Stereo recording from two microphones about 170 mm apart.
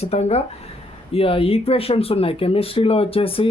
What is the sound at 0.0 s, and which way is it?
Speech, 35° left (ahead or behind).